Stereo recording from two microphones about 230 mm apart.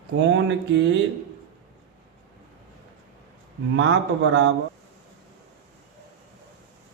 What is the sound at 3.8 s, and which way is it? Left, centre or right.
Speech, right.